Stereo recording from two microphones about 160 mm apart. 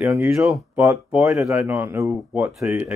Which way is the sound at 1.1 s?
5° right (ahead or behind).